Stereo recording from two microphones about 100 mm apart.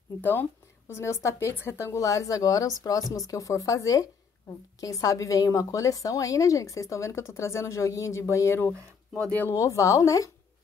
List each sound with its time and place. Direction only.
0.2 s a woman's voice: 20° left (ahead or behind)
9.6 s a woman's voice: 30° left (ahead or behind)